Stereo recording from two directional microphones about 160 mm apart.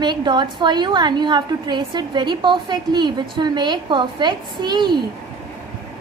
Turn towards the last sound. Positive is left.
turn(degrees=-30)  # may be behind; listen again after turning